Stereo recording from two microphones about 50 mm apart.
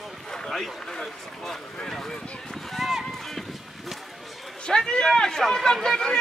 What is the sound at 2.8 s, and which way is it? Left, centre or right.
Run, centre.